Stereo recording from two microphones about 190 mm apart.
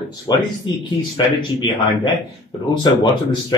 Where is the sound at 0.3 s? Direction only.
20° left (ahead or behind).